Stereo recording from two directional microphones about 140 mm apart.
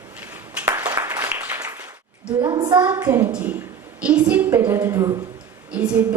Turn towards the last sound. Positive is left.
turn(degrees=-10)  # may be behind; listen again after turning